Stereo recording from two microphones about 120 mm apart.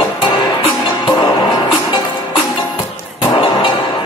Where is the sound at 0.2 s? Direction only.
45° left (ahead or behind).